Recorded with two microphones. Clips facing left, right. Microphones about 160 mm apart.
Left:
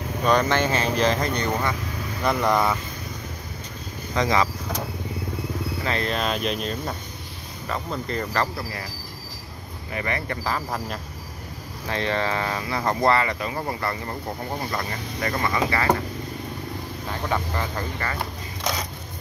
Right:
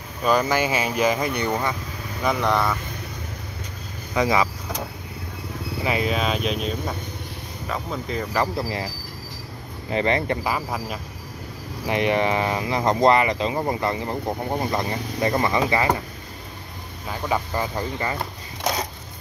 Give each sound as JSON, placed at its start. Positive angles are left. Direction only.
{"t": 0.2, "sound": "speech", "side_deg": -5}
{"t": 2.2, "sound": "speech", "side_deg": 0}
{"t": 4.1, "sound": "speech", "side_deg": -10}
{"t": 5.9, "sound": "speech", "side_deg": -5}
{"t": 8.5, "sound": "speech", "side_deg": -20}
{"t": 9.8, "sound": "speech", "side_deg": -25}
{"t": 10.4, "sound": "speech", "side_deg": -5}
{"t": 17.3, "sound": "speech", "side_deg": -15}